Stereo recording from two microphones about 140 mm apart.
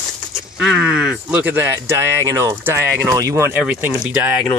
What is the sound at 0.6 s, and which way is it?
Speech, 5° right (ahead or behind).